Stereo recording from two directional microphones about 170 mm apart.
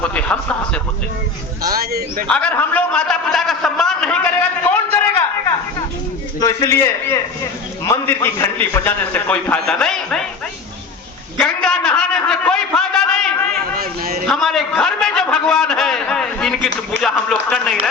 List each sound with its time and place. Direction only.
0.0 s a man's voice: 10° left (ahead or behind)
1.7 s speech: 65° right (ahead or behind)
2.3 s a man's voice: 10° left (ahead or behind)
6.4 s a man's voice: 20° left (ahead or behind); by 10.2 s 5° left (ahead or behind)
11.3 s a sound: 5° left (ahead or behind)
13.7 s a sound: 60° right (ahead or behind)
14.3 s a man's voice: centre (ahead or behind)